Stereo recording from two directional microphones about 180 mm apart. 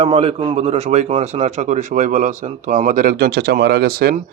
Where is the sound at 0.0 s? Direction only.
30° right (ahead or behind).